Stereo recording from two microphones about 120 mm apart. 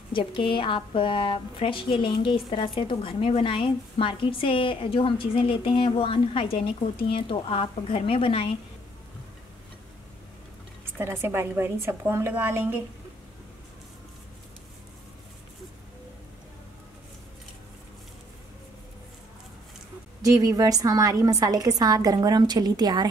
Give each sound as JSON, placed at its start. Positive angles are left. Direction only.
{"t": 0.1, "sound": "a woman's voice", "side_deg": 45}
{"t": 11.0, "sound": "a woman's voice", "side_deg": -20}
{"t": 20.2, "sound": "a woman's voice", "side_deg": -30}